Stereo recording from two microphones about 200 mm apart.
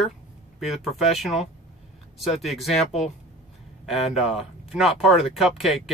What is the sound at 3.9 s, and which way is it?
Speech, centre (ahead or behind).